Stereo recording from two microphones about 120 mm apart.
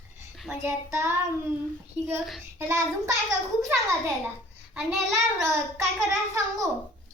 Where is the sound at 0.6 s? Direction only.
20° right (ahead or behind).